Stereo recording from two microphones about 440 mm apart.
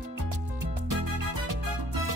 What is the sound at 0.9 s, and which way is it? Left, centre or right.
Music, right.